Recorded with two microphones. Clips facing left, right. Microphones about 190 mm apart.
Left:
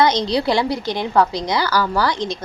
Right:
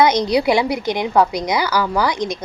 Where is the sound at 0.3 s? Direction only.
20° right (ahead or behind).